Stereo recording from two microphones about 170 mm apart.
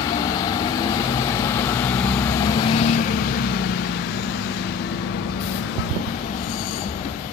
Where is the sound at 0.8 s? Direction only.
20° left (ahead or behind); by 2.9 s 35° left (ahead or behind).